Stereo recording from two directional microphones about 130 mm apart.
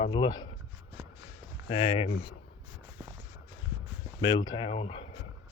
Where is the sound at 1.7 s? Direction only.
45° left (ahead or behind).